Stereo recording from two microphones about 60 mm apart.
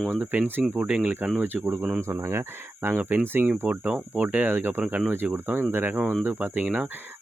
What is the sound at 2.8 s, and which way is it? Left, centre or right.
Speech, right.